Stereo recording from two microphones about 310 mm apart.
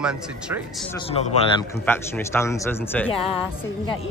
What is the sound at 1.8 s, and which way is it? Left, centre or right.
Speech, centre.